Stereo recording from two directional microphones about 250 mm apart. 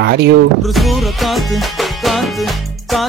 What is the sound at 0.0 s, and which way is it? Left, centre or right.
Speech, right.